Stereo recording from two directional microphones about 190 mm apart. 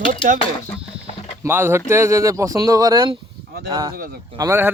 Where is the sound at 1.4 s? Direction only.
10° right (ahead or behind).